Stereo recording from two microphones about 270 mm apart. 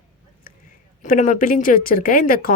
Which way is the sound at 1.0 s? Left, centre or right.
Left.